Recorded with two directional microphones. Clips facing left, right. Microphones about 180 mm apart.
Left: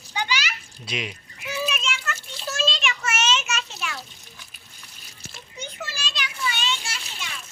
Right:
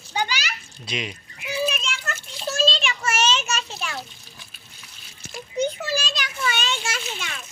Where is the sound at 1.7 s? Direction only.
40° right (ahead or behind).